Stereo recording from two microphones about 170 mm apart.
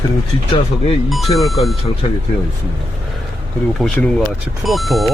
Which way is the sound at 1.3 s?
Centre (ahead or behind).